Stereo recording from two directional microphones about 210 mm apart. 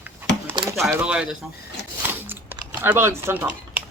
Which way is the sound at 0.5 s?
20° right (ahead or behind).